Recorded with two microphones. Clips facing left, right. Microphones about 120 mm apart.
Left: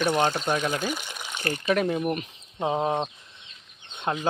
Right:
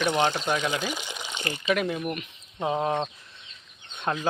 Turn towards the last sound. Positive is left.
turn(degrees=25)  # may be behind; listen again after turning